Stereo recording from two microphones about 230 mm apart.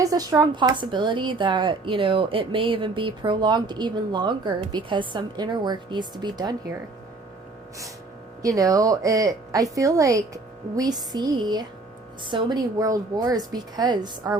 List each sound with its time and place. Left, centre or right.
0.0 s a woman's voice: centre
8.4 s a woman's voice: centre